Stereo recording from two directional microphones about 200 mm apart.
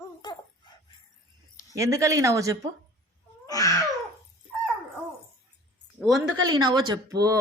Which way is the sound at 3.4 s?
15° left (ahead or behind).